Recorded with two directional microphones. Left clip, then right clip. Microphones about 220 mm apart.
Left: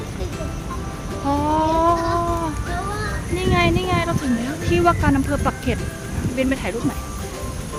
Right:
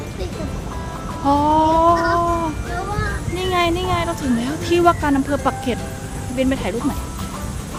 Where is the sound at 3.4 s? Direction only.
10° right (ahead or behind).